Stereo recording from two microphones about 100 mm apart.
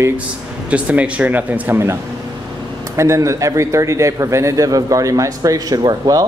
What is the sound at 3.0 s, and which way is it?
A man's voice, 30° right (ahead or behind).